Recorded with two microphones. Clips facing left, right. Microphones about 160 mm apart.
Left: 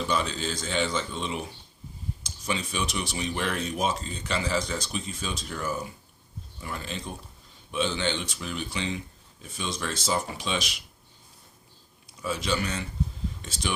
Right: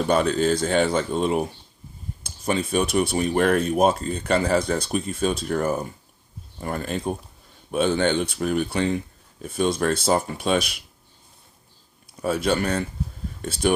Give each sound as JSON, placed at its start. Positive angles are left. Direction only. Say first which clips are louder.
{"t": 0.0, "sound": "speech", "louder": "right 9 dB", "side_deg": -50}
{"t": 12.2, "sound": "speech", "louder": "right 7 dB", "side_deg": -55}